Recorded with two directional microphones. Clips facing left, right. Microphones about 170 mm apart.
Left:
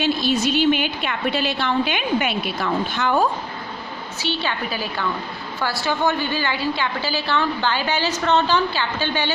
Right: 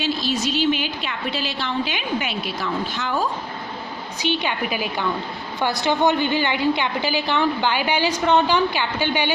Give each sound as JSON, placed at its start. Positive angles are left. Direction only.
{"t": 0.0, "sound": "a woman's voice", "side_deg": 55}
{"t": 4.2, "sound": "a woman's voice", "side_deg": -15}